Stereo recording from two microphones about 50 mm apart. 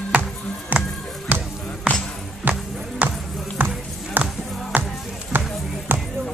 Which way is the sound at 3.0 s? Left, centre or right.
Right.